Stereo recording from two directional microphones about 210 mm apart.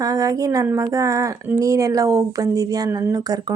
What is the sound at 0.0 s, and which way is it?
Speech, 15° right (ahead or behind).